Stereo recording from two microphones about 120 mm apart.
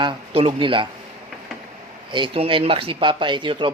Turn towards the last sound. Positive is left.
turn(degrees=-40)  # may be behind; listen again after turning